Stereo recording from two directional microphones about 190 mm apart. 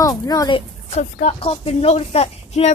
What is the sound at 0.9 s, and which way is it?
Speech, 35° left (ahead or behind).